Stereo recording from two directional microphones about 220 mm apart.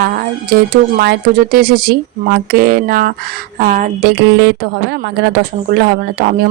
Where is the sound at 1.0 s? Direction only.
45° right (ahead or behind).